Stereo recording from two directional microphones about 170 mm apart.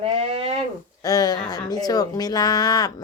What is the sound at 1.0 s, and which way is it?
Speech, 20° left (ahead or behind).